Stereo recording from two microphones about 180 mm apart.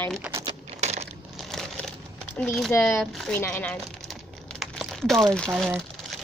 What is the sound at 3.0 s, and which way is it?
Speech, 5° left (ahead or behind).